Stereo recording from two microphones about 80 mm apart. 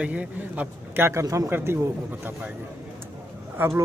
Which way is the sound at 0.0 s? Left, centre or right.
Centre.